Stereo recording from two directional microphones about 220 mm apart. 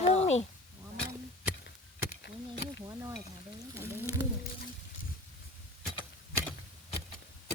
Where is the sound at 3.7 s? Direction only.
10° right (ahead or behind).